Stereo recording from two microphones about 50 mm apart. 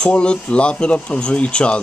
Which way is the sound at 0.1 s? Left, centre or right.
Left.